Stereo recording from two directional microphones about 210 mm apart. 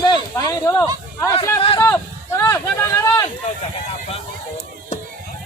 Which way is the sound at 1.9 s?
10° left (ahead or behind).